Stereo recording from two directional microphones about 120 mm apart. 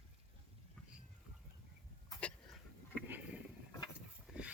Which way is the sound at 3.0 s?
15° right (ahead or behind).